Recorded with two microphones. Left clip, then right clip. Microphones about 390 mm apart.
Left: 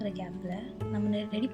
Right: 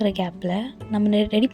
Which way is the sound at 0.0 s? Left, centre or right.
Right.